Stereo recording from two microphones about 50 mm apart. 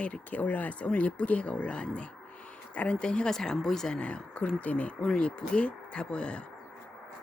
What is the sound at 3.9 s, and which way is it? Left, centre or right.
Speech, left.